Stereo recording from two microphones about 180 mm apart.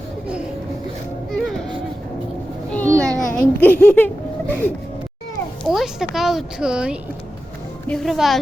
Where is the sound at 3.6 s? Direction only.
10° left (ahead or behind).